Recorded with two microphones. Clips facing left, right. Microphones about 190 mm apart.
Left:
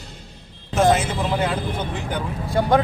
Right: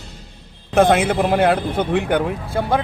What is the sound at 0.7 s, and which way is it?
Speech, 60° right (ahead or behind).